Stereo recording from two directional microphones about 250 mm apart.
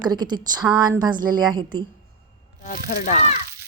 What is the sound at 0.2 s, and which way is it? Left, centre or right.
Speech, centre.